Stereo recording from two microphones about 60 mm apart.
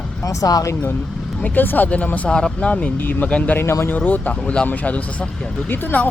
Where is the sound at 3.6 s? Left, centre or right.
Left.